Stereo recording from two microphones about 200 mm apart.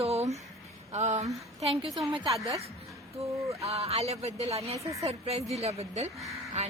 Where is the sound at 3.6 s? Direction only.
30° right (ahead or behind).